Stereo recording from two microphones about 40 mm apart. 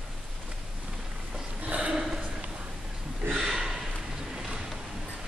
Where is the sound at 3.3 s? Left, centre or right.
Centre.